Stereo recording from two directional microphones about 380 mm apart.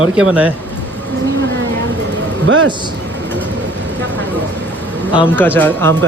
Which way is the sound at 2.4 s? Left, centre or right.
Right.